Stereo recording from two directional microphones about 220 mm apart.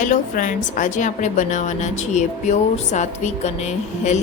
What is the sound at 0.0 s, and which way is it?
A woman's voice, 35° left (ahead or behind).